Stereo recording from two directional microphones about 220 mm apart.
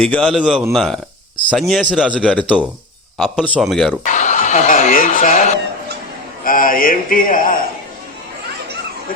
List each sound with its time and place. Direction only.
0.0 s a man's voice: centre (ahead or behind)
4.0 s a man's voice: 35° left (ahead or behind)